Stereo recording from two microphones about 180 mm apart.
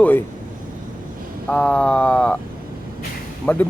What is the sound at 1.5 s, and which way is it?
Speech, 5° left (ahead or behind).